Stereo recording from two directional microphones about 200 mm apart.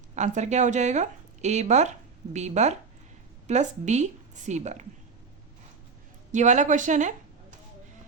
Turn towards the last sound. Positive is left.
turn(degrees=-40)  # may be behind; listen again after turning